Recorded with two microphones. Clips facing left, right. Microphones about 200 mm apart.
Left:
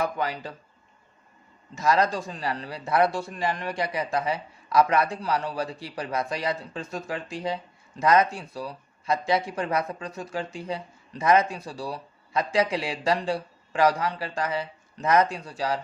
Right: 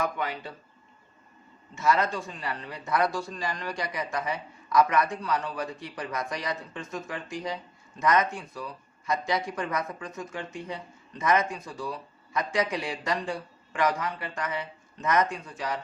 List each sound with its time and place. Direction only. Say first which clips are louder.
0.0 s speech: left 2 dB; 35° left (ahead or behind)
1.7 s speech: left 2 dB; 35° left (ahead or behind)